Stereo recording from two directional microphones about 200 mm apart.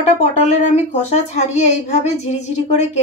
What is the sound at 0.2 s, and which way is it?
A child's voice, 35° left (ahead or behind).